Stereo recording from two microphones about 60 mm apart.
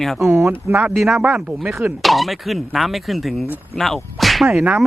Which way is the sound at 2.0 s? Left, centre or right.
Centre.